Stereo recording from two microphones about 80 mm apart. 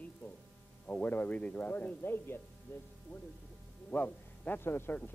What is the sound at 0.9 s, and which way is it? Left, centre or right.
Speech, left.